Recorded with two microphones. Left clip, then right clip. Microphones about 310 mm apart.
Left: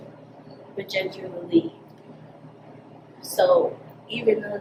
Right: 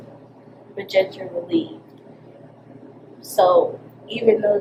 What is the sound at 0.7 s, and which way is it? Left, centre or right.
Speech, centre.